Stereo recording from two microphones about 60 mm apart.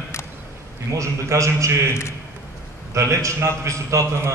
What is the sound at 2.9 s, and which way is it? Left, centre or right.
A man's voice, right.